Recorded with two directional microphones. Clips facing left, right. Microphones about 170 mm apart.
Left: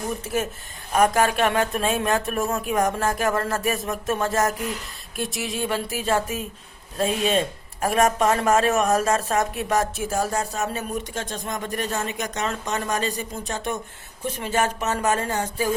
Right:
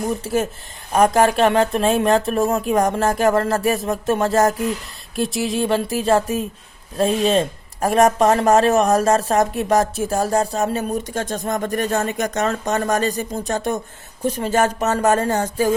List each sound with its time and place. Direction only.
0.9 s speech: 35° right (ahead or behind)